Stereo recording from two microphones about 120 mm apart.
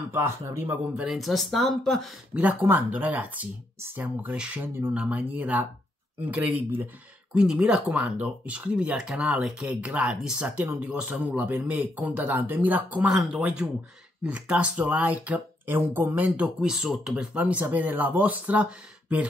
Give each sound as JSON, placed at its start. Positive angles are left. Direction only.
{"t": 0.1, "sound": "speech", "side_deg": -25}
{"t": 1.0, "sound": "speech", "side_deg": 0}
{"t": 2.3, "sound": "speech", "side_deg": -15}
{"t": 12.9, "sound": "speech", "side_deg": -5}